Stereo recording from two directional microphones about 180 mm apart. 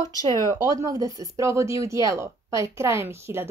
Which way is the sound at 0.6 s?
20° right (ahead or behind).